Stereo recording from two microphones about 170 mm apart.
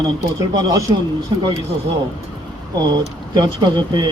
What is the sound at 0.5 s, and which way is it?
Speech, 25° right (ahead or behind).